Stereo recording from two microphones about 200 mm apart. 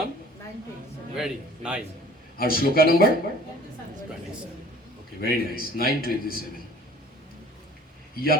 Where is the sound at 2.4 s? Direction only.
50° left (ahead or behind).